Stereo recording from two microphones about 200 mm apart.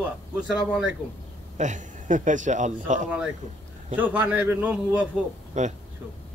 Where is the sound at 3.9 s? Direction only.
10° right (ahead or behind).